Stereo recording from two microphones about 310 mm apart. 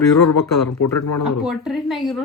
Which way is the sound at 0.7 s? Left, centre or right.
Left.